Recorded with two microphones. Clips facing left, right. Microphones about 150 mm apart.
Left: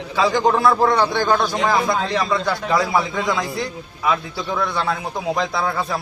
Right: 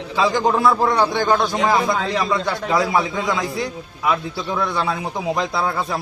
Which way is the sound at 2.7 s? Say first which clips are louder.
Right 1 dB; 15° right (ahead or behind).